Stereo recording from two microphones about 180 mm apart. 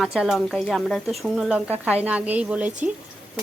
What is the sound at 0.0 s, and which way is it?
Speech, 5° right (ahead or behind).